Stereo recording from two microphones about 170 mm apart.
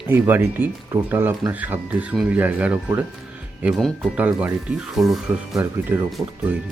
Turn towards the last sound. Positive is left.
turn(degrees=-10)  # may be behind; listen again after turning